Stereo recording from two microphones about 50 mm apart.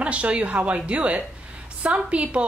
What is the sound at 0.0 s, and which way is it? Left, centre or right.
A woman's voice, right.